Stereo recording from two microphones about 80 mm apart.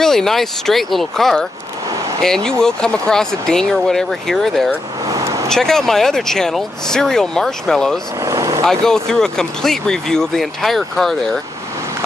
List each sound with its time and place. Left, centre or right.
0.0 s speech: centre
5.0 s vehicle: right
5.5 s speech: centre
8.2 s vehicle: right
8.6 s speech: centre